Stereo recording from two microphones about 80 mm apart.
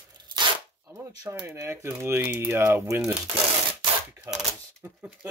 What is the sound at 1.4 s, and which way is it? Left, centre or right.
Speech, right.